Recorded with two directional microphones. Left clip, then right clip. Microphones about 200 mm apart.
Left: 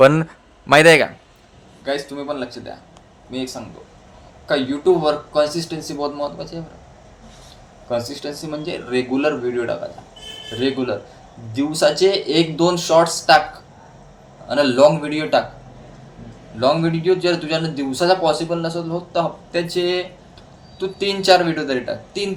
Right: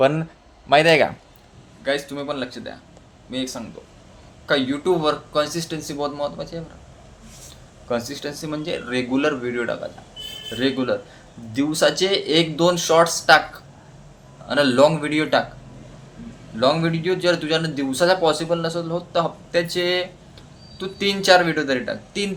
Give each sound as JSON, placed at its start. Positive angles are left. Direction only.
{"t": 0.0, "sound": "speech", "side_deg": 30}
{"t": 1.8, "sound": "a man's voice", "side_deg": 0}
{"t": 8.4, "sound": "a man's voice", "side_deg": -5}
{"t": 14.4, "sound": "a man's voice", "side_deg": -5}
{"t": 16.6, "sound": "a man's voice", "side_deg": 0}